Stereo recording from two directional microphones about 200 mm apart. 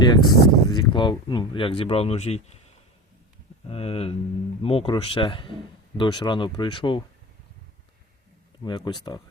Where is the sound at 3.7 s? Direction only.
30° left (ahead or behind).